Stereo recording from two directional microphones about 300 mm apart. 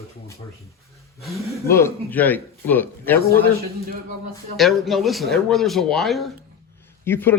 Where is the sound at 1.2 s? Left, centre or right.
Centre.